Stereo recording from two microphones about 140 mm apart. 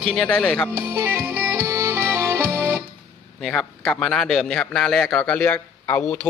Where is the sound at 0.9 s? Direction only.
15° right (ahead or behind).